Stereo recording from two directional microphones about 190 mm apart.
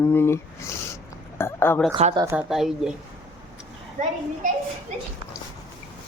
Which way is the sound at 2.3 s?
Centre (ahead or behind).